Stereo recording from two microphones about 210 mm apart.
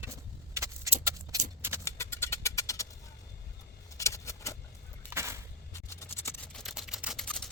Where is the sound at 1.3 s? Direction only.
15° right (ahead or behind).